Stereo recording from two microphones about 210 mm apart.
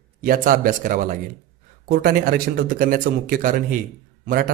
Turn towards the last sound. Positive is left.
turn(degrees=-40)  # may be behind; listen again after turning